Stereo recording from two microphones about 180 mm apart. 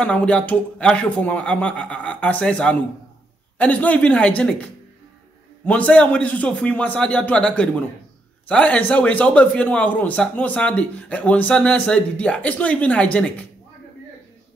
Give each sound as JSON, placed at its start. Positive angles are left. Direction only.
{"t": 0.0, "sound": "speech", "side_deg": 5}
{"t": 5.7, "sound": "speech", "side_deg": 5}